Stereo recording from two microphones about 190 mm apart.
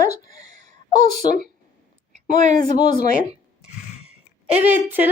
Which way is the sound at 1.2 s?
25° left (ahead or behind).